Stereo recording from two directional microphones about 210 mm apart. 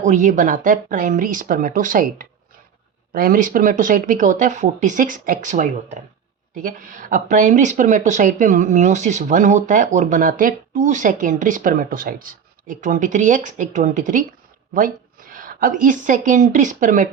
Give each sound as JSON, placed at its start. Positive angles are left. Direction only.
{"t": 0.0, "sound": "speech", "side_deg": -35}